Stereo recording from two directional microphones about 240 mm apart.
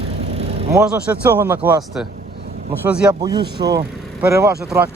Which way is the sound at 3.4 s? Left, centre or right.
Right.